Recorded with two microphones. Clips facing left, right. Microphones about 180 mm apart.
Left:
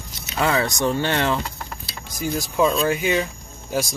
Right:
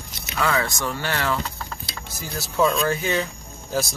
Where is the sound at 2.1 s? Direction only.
15° left (ahead or behind).